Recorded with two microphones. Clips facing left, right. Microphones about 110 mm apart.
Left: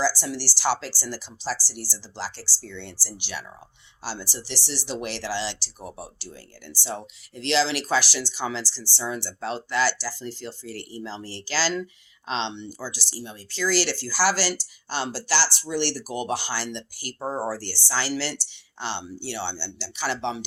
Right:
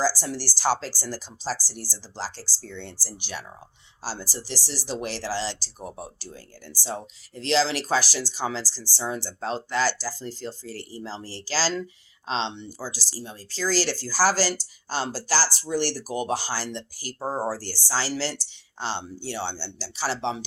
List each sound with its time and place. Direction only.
0.0 s speech: 40° right (ahead or behind)